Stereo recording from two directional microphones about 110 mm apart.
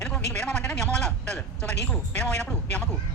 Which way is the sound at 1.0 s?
10° left (ahead or behind).